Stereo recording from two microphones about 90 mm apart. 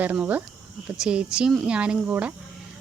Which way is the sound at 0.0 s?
20° right (ahead or behind).